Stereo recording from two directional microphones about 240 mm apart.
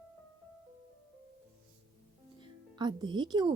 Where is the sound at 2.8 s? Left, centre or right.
Centre.